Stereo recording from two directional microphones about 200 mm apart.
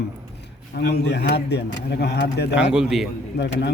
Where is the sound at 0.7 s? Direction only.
55° left (ahead or behind).